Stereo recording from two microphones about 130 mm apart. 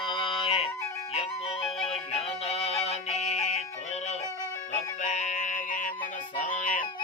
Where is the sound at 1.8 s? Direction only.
50° left (ahead or behind).